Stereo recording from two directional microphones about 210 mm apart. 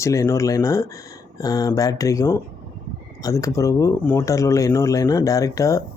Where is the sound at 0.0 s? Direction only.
15° left (ahead or behind).